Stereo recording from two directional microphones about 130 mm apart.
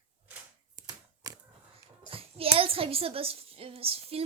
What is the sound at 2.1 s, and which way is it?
A woman's voice, 45° right (ahead or behind).